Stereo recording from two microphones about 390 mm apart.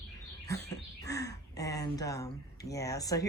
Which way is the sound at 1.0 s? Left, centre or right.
Centre.